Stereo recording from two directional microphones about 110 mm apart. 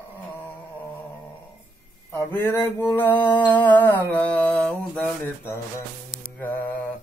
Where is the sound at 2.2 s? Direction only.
20° left (ahead or behind).